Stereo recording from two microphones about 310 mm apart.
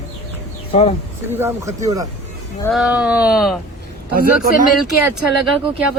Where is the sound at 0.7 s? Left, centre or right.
Centre.